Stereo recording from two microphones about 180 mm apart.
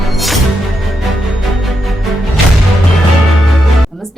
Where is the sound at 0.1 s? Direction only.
Centre (ahead or behind).